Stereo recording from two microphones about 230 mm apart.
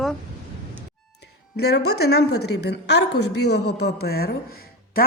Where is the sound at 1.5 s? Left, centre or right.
Left.